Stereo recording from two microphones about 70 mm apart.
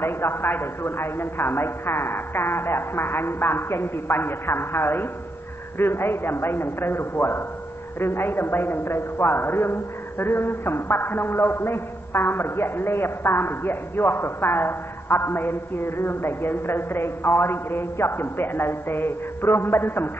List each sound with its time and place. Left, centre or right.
0.0 s a man's voice: left